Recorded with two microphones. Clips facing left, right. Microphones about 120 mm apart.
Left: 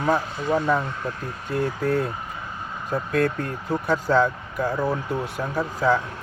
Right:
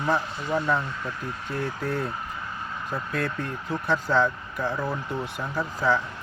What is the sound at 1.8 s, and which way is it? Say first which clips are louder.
Speech: left 7 dB; 45° left (ahead or behind).